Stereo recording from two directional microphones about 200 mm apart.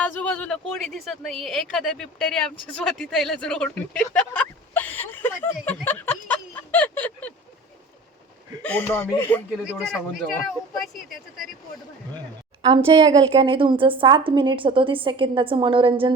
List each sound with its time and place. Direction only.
0.0 s a woman's voice: 5° left (ahead or behind)
5.6 s a sound: 10° left (ahead or behind)
8.6 s speech: 10° left (ahead or behind)
12.6 s a woman's voice: 25° right (ahead or behind)